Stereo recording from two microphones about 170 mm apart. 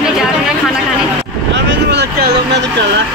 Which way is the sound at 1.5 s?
85° right.